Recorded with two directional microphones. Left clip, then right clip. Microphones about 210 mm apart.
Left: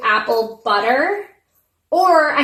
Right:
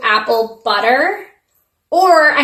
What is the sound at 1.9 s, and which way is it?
Speech, 10° right (ahead or behind).